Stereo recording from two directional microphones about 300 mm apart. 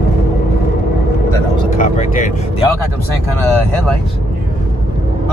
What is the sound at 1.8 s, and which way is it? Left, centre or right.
Speech, left.